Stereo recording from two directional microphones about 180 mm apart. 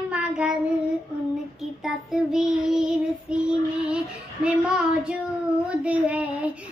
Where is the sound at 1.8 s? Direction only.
Centre (ahead or behind).